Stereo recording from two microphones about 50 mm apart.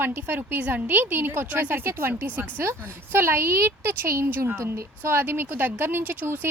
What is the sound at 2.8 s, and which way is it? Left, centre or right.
A woman's voice, right.